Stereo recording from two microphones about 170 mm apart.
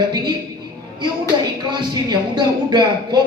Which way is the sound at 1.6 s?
25° right (ahead or behind).